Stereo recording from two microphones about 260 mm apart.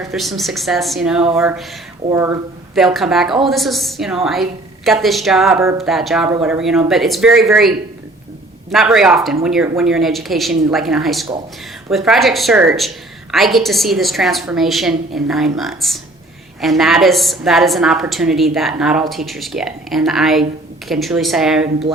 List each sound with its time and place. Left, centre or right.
0.1 s a woman's voice: centre
8.7 s a woman's voice: centre